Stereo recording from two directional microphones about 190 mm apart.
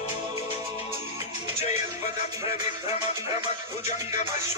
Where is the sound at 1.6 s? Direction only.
35° left (ahead or behind).